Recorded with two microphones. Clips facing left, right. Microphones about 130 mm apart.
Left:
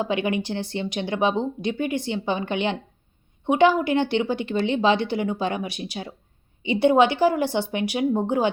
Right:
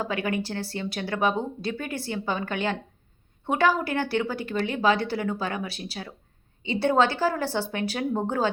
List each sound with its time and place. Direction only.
0.0 s speech: 20° left (ahead or behind)